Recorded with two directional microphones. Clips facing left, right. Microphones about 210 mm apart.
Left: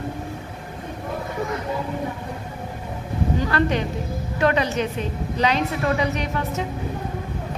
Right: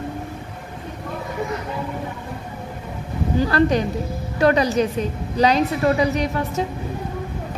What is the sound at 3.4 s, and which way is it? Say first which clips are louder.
A woman's voice: right 7 dB; 35° right (ahead or behind).